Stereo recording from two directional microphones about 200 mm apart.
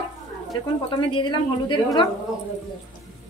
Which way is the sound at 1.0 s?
25° left (ahead or behind).